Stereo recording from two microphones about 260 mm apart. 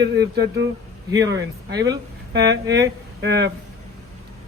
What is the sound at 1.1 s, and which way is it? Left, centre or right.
Speech, centre.